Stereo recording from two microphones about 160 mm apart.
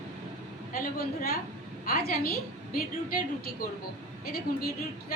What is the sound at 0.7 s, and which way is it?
A woman's voice, 65° left (ahead or behind).